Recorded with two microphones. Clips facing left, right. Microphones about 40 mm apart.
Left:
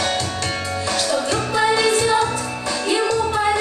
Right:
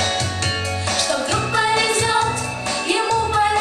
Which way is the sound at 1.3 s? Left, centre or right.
Centre.